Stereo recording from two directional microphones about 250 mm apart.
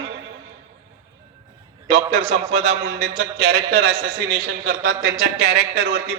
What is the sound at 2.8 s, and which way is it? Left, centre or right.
A man's voice, right.